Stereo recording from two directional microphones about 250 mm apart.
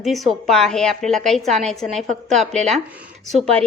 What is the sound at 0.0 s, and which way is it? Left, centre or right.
A woman's voice, centre.